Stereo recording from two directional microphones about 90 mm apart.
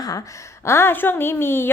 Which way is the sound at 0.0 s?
40° left (ahead or behind).